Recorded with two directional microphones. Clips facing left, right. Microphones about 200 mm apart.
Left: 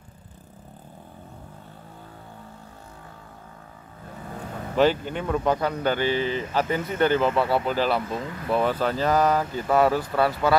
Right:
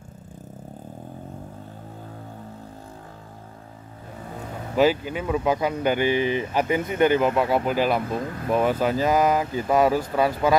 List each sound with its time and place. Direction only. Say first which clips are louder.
4.7 s speech: right 1 dB; 5° right (ahead or behind)
8.1 s speech: right 3 dB; 50° right (ahead or behind)
8.5 s speech: right 2 dB; 10° right (ahead or behind)